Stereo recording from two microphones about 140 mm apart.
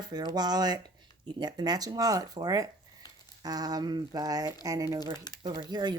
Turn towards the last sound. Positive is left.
turn(degrees=-30)  # may be behind; listen again after turning